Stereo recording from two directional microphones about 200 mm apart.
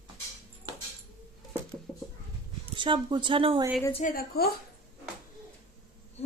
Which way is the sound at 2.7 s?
25° right (ahead or behind).